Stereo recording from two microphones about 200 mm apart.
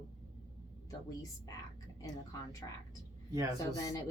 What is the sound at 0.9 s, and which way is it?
Speech, 15° left (ahead or behind).